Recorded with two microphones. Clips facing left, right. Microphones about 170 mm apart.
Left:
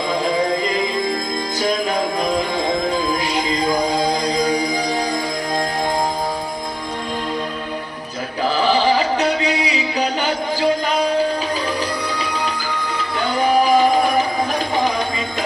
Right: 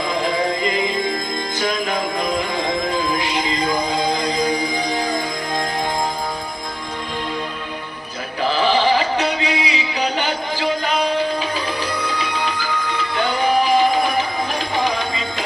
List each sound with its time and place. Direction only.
1.5 s music: 40° left (ahead or behind)
3.9 s music: 40° left (ahead or behind)
9.1 s music: 40° left (ahead or behind)